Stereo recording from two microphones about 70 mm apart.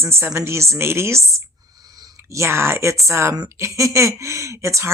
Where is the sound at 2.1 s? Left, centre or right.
Right.